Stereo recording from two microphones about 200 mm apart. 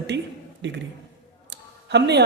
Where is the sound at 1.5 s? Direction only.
60° right (ahead or behind).